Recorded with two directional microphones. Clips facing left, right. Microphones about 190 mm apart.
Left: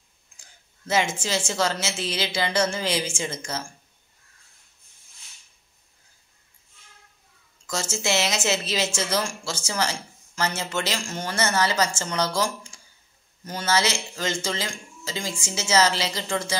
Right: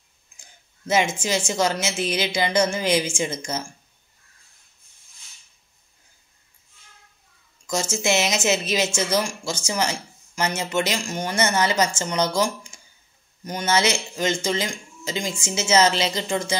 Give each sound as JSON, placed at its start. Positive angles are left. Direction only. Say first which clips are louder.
{"t": 0.4, "sound": "a woman's voice", "louder": "right 5 dB", "side_deg": -20}
{"t": 7.6, "sound": "a woman's voice", "louder": "right 4 dB", "side_deg": -15}